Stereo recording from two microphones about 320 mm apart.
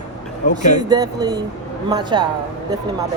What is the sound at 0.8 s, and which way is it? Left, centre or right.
Speech, centre.